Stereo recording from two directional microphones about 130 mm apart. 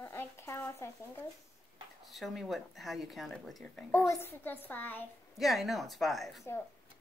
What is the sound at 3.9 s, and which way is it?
A child's voice, 20° left (ahead or behind).